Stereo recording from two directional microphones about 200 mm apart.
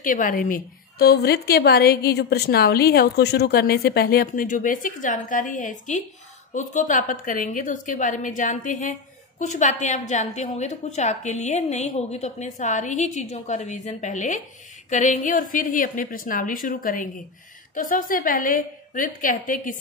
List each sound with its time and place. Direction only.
0.0 s a woman's voice: 40° left (ahead or behind)